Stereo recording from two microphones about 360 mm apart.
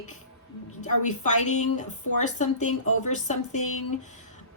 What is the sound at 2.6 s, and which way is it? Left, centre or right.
Speech, left.